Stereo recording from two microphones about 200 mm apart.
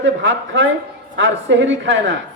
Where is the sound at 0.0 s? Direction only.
70° right (ahead or behind).